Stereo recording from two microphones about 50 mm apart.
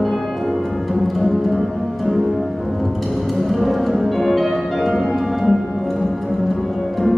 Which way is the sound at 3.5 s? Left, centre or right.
Centre.